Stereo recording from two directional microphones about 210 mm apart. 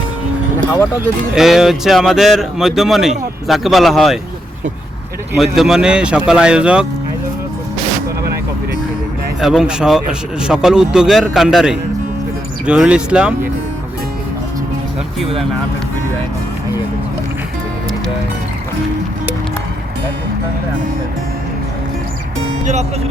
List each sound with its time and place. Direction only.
1.4 s speech: centre (ahead or behind)
5.4 s speech: centre (ahead or behind)
9.4 s speech: 5° right (ahead or behind)
22.6 s speech: 35° right (ahead or behind)